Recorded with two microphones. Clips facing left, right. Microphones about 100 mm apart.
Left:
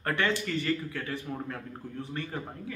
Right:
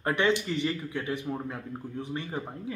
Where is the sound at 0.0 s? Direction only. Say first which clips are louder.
Right 3 dB; 20° right (ahead or behind).